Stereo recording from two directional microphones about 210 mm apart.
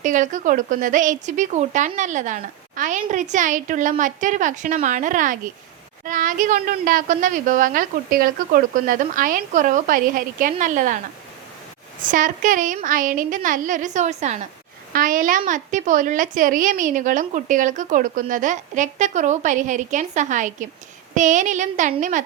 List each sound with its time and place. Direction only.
0.0 s a woman's voice: 40° right (ahead or behind)
12.1 s a woman's voice: 40° right (ahead or behind)